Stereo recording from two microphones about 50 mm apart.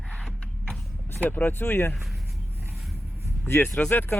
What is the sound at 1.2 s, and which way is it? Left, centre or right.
Speech, left.